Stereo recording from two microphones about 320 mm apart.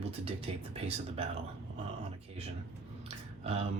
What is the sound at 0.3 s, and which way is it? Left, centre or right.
Speech, centre.